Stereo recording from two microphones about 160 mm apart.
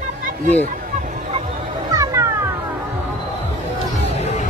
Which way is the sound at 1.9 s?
20° right (ahead or behind).